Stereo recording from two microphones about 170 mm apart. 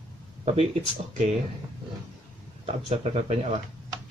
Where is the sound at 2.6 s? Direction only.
40° right (ahead or behind).